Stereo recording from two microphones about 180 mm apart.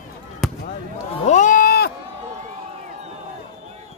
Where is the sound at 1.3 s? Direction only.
45° left (ahead or behind).